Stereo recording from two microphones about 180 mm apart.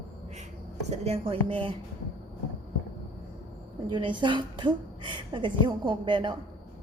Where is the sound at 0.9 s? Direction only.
30° right (ahead or behind).